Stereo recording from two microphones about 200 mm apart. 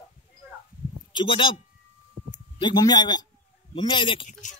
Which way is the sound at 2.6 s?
20° left (ahead or behind).